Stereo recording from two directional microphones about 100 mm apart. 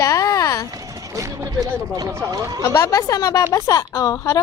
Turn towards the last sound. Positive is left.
turn(degrees=35)  # may be behind; listen again after turning